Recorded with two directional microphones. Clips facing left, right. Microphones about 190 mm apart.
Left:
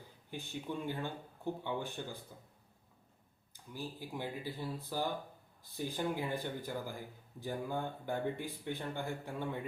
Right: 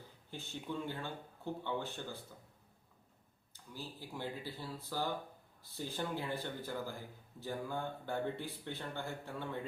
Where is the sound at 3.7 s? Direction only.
15° left (ahead or behind).